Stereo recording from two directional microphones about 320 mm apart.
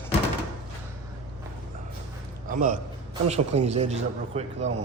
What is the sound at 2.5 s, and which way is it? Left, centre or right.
A man's voice, right.